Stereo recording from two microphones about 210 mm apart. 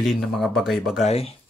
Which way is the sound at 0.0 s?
Centre (ahead or behind).